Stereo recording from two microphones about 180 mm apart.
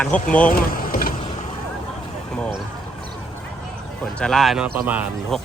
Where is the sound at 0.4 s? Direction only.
50° left (ahead or behind).